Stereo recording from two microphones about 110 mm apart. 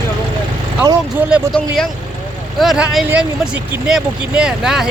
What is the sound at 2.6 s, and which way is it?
Speech, centre (ahead or behind).